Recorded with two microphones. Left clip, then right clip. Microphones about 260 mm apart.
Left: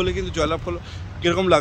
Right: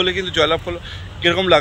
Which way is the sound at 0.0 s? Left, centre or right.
Centre.